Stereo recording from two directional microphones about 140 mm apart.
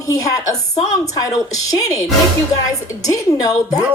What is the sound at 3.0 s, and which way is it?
Speech, 25° left (ahead or behind).